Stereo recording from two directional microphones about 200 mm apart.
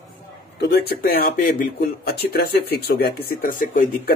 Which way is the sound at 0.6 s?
55° left (ahead or behind).